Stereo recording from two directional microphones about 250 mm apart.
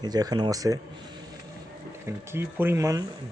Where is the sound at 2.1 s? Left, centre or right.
Centre.